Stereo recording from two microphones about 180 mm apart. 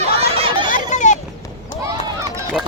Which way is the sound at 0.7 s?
40° left (ahead or behind).